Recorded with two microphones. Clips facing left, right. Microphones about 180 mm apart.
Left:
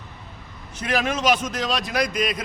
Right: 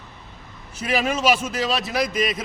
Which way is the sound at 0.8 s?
5° right (ahead or behind).